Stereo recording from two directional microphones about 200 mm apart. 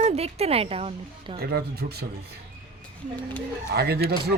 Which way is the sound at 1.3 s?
50° right (ahead or behind).